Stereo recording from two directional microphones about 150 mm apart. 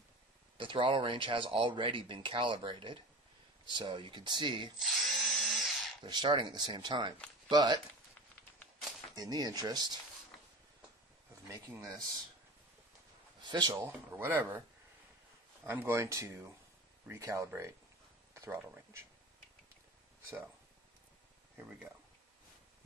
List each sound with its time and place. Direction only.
0.6 s speech: 35° right (ahead or behind)
4.7 s drill: centre (ahead or behind)
6.0 s speech: 30° right (ahead or behind)
9.1 s speech: 25° right (ahead or behind)
11.4 s speech: 20° right (ahead or behind)
13.5 s speech: 30° right (ahead or behind)
13.7 s speech: 15° right (ahead or behind)
15.6 s speech: 15° right (ahead or behind)
18.3 s a sound: 20° right (ahead or behind)